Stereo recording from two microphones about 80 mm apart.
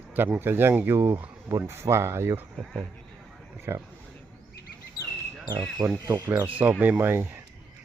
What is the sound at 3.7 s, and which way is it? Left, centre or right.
Speech, right.